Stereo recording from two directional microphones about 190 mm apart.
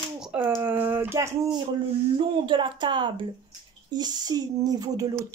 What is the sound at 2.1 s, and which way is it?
A woman's voice, 25° right (ahead or behind).